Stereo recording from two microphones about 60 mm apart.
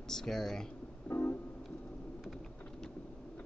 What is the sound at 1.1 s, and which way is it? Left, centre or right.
Music, left.